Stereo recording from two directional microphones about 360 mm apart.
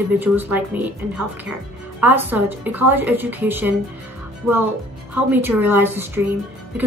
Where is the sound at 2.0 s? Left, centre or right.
Centre.